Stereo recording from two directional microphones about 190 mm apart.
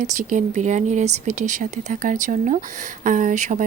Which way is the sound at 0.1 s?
40° right (ahead or behind).